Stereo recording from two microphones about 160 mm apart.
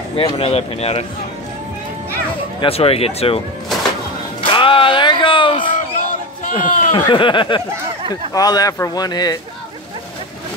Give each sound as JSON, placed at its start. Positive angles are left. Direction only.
{"t": 0.1, "sound": "speech", "side_deg": 35}
{"t": 2.6, "sound": "speech", "side_deg": 40}
{"t": 4.4, "sound": "music", "side_deg": 35}
{"t": 5.7, "sound": "a sound", "side_deg": 55}
{"t": 6.9, "sound": "speech", "side_deg": 30}